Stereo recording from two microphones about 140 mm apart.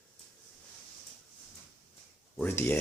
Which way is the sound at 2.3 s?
15° left (ahead or behind).